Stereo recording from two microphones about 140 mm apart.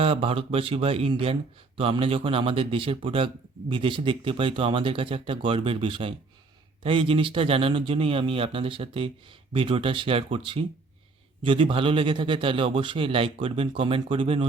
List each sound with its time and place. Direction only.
0.0 s speech: 40° right (ahead or behind)